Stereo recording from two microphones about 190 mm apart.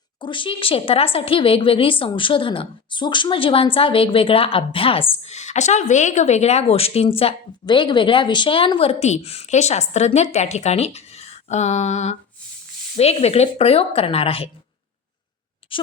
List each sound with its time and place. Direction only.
0.2 s a woman's voice: 25° left (ahead or behind)
15.7 s a woman's voice: 25° left (ahead or behind)